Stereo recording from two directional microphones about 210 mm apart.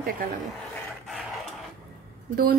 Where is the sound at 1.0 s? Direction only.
Centre (ahead or behind).